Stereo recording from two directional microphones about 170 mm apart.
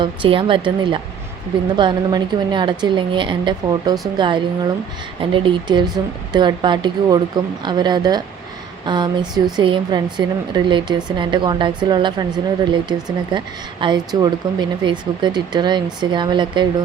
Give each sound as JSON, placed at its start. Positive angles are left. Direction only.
{"t": 0.0, "sound": "a woman's voice", "side_deg": -30}